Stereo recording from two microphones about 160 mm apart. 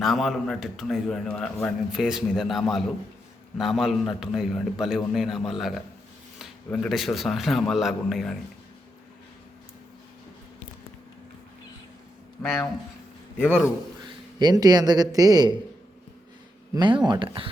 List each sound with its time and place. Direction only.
0.0 s a man's voice: centre (ahead or behind)
12.4 s a man's voice: centre (ahead or behind)
14.0 s a man's voice: 25° right (ahead or behind)
16.7 s speech: 30° right (ahead or behind)